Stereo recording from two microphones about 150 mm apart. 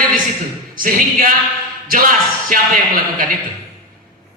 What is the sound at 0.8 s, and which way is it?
Speech, 65° right (ahead or behind).